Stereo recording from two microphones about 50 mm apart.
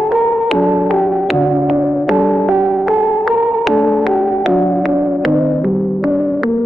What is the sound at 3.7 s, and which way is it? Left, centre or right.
Music, left.